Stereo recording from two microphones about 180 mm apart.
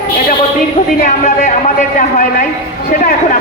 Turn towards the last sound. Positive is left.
turn(degrees=45)  # may be behind; listen again after turning